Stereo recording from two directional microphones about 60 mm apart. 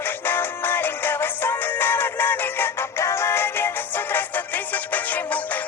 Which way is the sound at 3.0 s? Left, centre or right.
Left.